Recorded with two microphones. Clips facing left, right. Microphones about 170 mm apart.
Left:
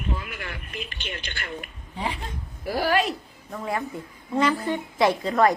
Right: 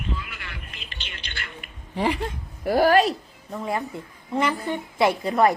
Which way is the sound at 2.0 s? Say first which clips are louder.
Right 7 dB; 75° right (ahead or behind).